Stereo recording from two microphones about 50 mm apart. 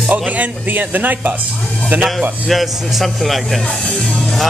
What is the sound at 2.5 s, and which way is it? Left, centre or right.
Speech, centre.